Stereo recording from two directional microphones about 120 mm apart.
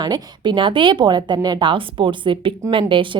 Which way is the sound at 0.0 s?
35° right (ahead or behind).